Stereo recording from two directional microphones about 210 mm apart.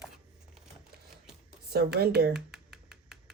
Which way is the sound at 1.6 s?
50° right (ahead or behind).